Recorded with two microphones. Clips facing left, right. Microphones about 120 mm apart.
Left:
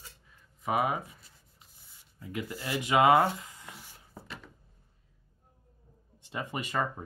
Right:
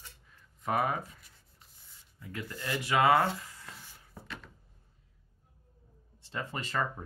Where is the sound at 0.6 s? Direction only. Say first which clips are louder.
Left 1 dB; 5° left (ahead or behind).